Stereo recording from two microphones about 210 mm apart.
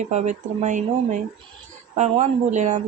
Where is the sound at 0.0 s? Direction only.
35° right (ahead or behind).